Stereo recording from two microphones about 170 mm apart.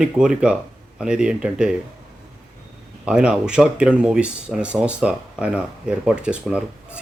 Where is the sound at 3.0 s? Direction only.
5° right (ahead or behind).